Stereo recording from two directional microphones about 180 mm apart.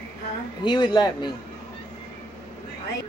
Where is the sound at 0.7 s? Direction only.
25° left (ahead or behind).